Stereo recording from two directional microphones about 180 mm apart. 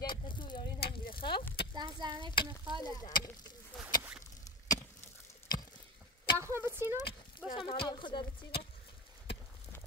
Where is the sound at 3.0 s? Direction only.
20° left (ahead or behind).